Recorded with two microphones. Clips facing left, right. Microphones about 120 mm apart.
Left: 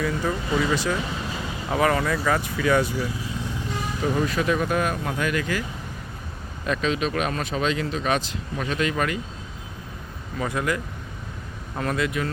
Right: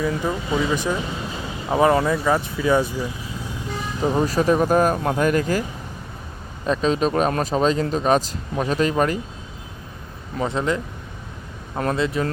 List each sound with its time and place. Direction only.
0.0 s speech: 15° right (ahead or behind)
4.0 s speech: 35° right (ahead or behind)
6.7 s speech: 35° right (ahead or behind)
10.4 s speech: 25° right (ahead or behind)
11.9 s speech: 30° right (ahead or behind)